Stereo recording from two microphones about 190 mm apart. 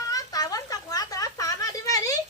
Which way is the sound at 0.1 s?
20° left (ahead or behind).